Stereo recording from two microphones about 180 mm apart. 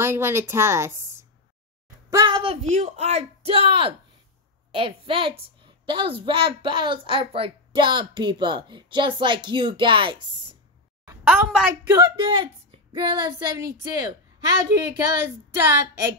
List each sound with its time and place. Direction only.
0.0 s a woman's voice: 15° right (ahead or behind)
11.2 s a woman's voice: 5° right (ahead or behind)
11.9 s a woman's voice: 20° right (ahead or behind)